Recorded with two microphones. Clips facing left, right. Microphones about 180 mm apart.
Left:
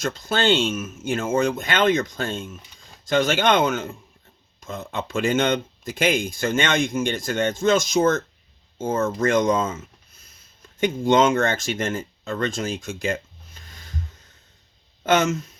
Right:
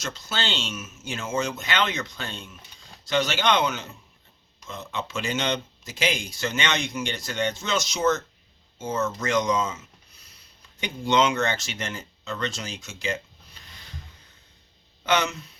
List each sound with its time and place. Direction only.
0.0 s speech: 50° left (ahead or behind)
15.0 s speech: 45° left (ahead or behind)